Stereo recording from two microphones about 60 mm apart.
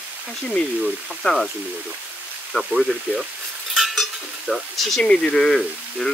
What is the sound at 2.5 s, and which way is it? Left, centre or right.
Speech, left.